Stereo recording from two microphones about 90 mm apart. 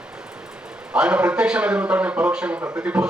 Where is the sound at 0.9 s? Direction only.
15° right (ahead or behind).